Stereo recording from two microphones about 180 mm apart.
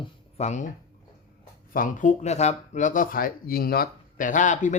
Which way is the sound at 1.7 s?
45° left (ahead or behind).